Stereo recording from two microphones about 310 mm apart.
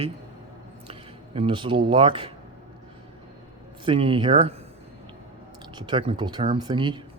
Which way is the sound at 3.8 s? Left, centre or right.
Centre.